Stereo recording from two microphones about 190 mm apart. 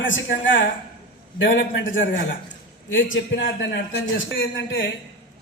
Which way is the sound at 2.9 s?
85° left.